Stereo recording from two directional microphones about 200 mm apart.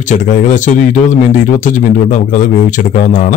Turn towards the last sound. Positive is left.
turn(degrees=40)  # may be behind; listen again after turning